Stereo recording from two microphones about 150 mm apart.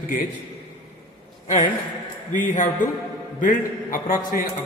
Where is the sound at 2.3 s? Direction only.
60° left (ahead or behind).